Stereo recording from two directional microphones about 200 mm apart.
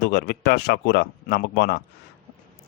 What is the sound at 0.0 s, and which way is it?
A man's voice, 50° left (ahead or behind).